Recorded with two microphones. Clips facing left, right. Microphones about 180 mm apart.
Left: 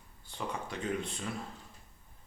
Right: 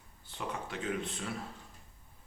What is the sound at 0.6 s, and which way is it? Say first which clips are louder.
Speech: left 1 dB; centre (ahead or behind).